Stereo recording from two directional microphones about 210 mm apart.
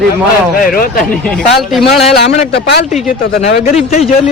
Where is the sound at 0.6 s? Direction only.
40° left (ahead or behind).